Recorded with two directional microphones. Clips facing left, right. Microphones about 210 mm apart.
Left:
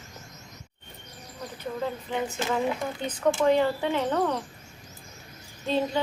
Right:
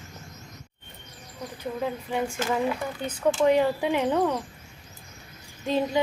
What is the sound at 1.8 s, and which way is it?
A woman's voice, 10° right (ahead or behind).